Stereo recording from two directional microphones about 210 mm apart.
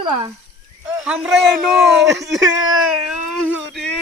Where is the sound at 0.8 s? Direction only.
5° right (ahead or behind).